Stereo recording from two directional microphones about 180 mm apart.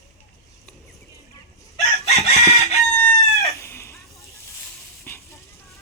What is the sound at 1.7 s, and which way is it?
Chicken, 35° left (ahead or behind).